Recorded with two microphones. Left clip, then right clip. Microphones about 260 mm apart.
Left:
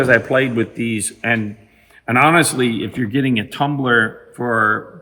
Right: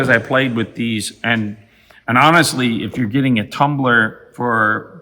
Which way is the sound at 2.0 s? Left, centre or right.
Centre.